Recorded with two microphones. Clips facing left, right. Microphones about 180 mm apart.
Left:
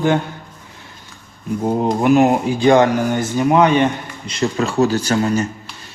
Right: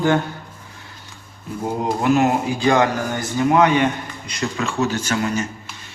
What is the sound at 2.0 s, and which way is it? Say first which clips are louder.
A man's voice: left 4 dB; 20° left (ahead or behind).